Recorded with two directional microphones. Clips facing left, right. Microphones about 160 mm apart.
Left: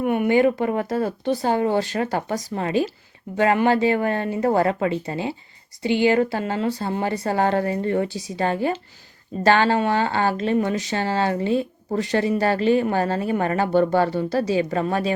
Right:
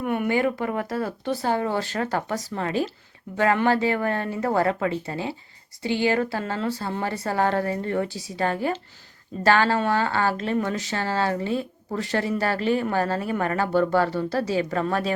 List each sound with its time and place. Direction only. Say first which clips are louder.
0.0 s speech: left 5 dB; 20° left (ahead or behind)